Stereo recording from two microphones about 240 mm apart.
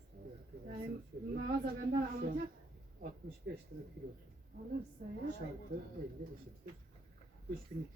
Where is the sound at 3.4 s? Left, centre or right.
Right.